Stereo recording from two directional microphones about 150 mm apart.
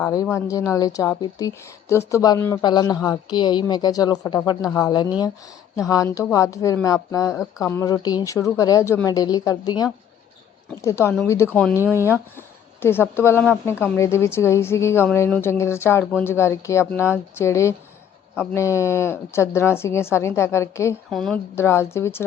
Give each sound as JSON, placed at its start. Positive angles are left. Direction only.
{"t": 0.0, "sound": "speech", "side_deg": 20}
{"t": 12.4, "sound": "a woman's voice", "side_deg": 15}
{"t": 21.1, "sound": "speech", "side_deg": 5}
{"t": 21.5, "sound": "a woman's voice", "side_deg": 15}